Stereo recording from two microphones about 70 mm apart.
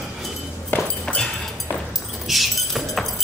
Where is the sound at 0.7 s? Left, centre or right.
Left.